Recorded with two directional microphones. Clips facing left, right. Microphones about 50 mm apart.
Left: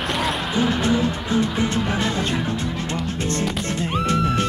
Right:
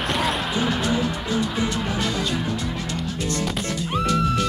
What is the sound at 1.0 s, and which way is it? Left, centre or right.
Music, left.